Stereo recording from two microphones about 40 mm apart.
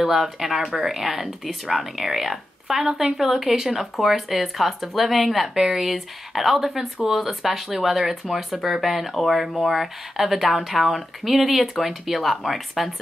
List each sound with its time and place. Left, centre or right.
0.0 s speech: centre
2.9 s speech: right
3.2 s speech: centre